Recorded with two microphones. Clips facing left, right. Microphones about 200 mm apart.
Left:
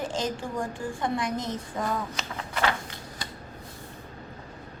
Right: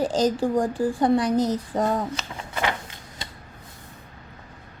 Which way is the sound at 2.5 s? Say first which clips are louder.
Right 1 dB; 20° right (ahead or behind).